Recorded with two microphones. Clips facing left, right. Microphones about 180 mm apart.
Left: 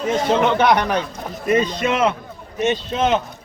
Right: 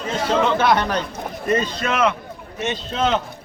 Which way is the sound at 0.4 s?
15° left (ahead or behind).